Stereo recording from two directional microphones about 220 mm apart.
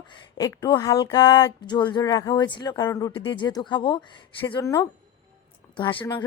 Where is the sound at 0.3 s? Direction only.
20° left (ahead or behind).